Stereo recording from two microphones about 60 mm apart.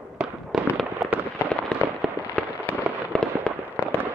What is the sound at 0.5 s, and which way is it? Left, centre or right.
Fireworks, centre.